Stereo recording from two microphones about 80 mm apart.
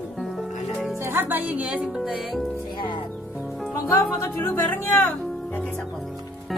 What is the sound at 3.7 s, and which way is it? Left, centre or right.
Speech, left.